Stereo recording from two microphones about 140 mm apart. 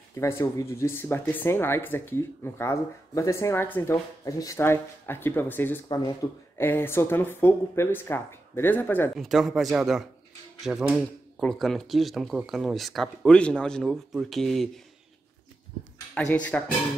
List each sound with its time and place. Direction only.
0.1 s speech: 20° left (ahead or behind)
5.9 s speech: 30° left (ahead or behind)
6.6 s speech: 15° left (ahead or behind)
9.1 s speech: centre (ahead or behind)
16.2 s speech: 10° left (ahead or behind)